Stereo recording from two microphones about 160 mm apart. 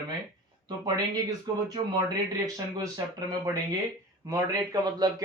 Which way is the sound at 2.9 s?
25° right (ahead or behind).